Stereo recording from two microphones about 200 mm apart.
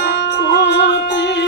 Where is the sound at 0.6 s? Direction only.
60° left (ahead or behind).